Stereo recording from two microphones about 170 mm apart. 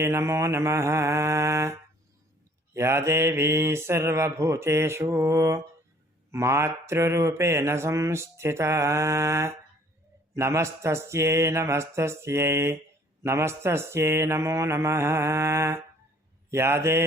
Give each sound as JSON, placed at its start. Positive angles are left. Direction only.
{"t": 0.0, "sound": "speech", "side_deg": -15}